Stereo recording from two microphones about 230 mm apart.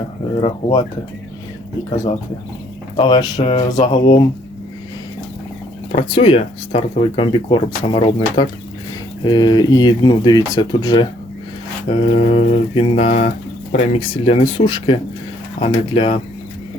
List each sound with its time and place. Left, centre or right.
0.4 s speech: centre
2.9 s speech: left
5.9 s speech: left